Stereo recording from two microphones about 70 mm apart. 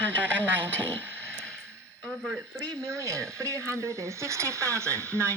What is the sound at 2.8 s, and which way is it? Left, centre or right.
Speech, right.